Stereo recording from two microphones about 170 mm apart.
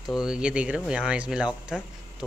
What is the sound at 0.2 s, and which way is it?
Speech, 5° right (ahead or behind).